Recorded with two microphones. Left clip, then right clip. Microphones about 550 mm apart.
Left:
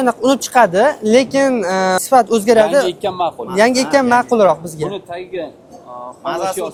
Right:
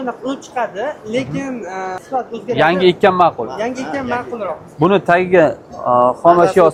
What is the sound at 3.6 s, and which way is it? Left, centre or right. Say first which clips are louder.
Speech: left 14 dB; left.